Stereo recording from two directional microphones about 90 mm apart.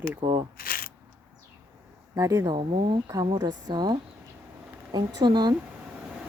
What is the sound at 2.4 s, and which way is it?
Speech, 65° right (ahead or behind).